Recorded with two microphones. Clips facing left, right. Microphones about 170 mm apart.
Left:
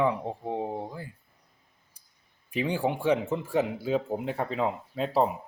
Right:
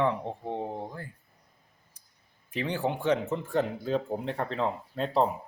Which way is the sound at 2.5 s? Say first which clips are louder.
Left 2 dB; 10° left (ahead or behind).